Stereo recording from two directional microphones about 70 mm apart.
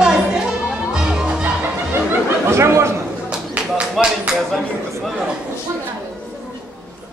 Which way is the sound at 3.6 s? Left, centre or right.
Centre.